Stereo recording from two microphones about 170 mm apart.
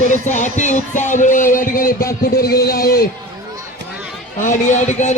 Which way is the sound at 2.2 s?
60° left (ahead or behind).